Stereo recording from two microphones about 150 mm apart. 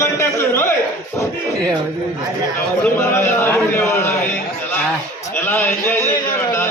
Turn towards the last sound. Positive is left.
turn(degrees=15)  # may be behind; listen again after turning